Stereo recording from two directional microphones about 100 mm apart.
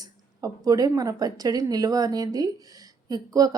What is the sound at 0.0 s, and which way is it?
Speech, 40° right (ahead or behind).